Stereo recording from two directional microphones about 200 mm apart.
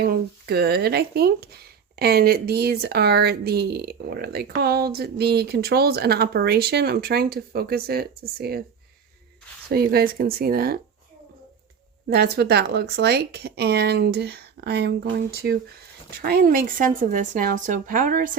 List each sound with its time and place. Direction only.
0.0 s speech: 50° right (ahead or behind)
9.6 s speech: 50° right (ahead or behind)
12.0 s speech: 55° right (ahead or behind)